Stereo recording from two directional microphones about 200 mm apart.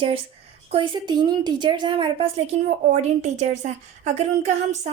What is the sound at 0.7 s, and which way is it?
A woman's voice, 25° right (ahead or behind).